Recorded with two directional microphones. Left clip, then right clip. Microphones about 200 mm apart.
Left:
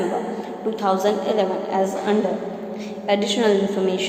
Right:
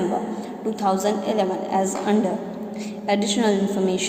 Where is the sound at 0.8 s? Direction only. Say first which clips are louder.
Left 2 dB; 25° right (ahead or behind).